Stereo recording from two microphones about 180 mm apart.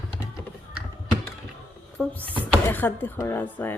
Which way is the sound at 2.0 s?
10° left (ahead or behind).